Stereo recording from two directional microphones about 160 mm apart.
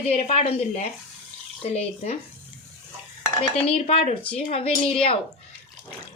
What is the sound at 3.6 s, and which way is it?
A woman's voice, 40° left (ahead or behind).